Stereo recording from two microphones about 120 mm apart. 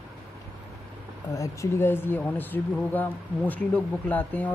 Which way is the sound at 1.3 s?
25° left (ahead or behind).